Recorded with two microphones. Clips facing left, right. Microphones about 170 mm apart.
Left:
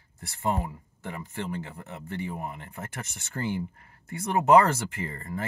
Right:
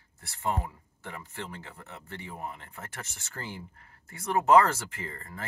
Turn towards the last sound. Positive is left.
turn(degrees=15)  # may be behind; listen again after turning